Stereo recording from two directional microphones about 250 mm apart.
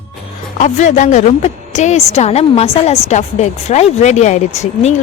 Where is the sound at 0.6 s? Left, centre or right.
Left.